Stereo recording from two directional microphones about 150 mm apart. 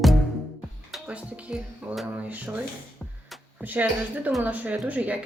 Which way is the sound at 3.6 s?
10° right (ahead or behind).